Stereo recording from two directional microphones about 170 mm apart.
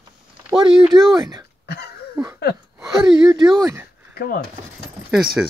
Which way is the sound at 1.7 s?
75° left (ahead or behind).